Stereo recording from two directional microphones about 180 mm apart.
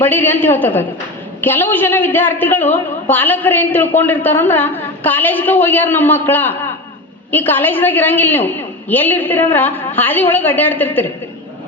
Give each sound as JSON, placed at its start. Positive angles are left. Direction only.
{"t": 0.0, "sound": "a woman's voice", "side_deg": 10}